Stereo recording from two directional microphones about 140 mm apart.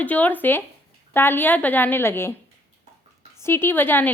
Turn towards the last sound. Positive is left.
turn(degrees=15)  # may be behind; listen again after turning